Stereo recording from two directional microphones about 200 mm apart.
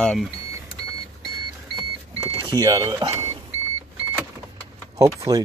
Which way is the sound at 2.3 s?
20° right (ahead or behind).